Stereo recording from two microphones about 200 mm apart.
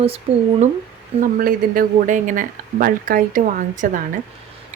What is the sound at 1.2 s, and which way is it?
Speech, 45° right (ahead or behind).